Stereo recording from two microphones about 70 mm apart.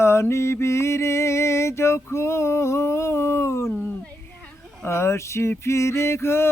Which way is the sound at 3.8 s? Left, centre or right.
Left.